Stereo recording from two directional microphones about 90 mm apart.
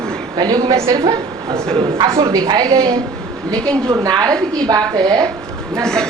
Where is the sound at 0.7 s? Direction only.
35° right (ahead or behind).